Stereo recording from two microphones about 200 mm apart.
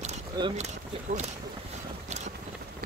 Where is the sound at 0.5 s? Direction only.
35° right (ahead or behind).